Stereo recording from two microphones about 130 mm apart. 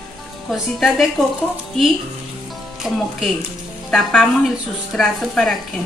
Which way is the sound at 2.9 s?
Centre (ahead or behind).